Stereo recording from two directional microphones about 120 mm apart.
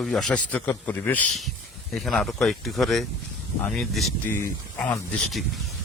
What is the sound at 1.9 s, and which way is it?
Speech, 5° left (ahead or behind).